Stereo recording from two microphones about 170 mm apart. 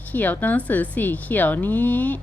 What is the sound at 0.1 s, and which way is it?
A woman's voice, 10° left (ahead or behind).